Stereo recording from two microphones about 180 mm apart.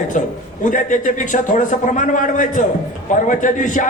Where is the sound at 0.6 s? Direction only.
45° left (ahead or behind).